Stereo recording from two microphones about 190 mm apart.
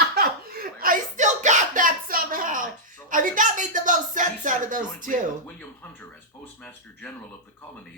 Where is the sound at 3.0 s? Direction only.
45° right (ahead or behind).